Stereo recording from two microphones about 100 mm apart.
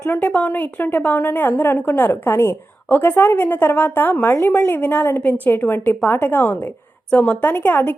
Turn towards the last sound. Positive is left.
turn(degrees=20)  # may be behind; listen again after turning